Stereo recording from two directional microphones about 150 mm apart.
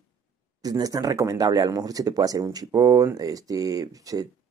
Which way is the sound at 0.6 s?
25° right (ahead or behind).